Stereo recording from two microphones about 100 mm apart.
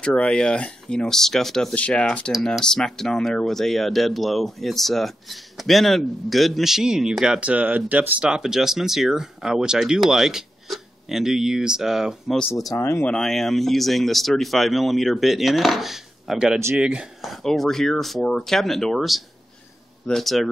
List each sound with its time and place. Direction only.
0.0 s speech: 10° left (ahead or behind); by 12.4 s 5° right (ahead or behind)
12.4 s speech: 30° left (ahead or behind)
13.0 s speech: 5° left (ahead or behind)